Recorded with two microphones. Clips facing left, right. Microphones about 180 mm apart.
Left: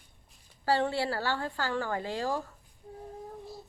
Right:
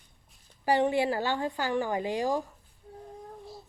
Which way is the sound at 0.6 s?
15° right (ahead or behind).